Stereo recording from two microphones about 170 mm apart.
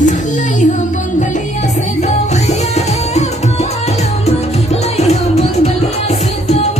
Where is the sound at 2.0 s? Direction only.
40° left (ahead or behind).